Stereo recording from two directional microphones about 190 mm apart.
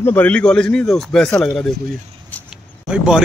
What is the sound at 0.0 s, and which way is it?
Speech, 10° left (ahead or behind).